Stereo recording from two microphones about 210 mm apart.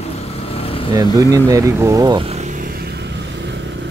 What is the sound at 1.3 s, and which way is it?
Vehicle, 15° right (ahead or behind).